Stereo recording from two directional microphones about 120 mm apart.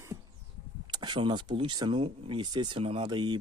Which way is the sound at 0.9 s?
40° right (ahead or behind).